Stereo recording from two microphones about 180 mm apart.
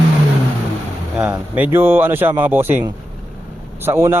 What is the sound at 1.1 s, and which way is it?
A man's voice, 5° right (ahead or behind).